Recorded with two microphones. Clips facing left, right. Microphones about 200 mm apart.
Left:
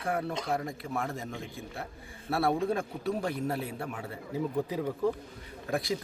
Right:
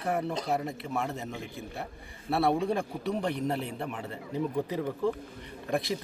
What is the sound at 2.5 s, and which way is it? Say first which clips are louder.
Speech: even; centre (ahead or behind).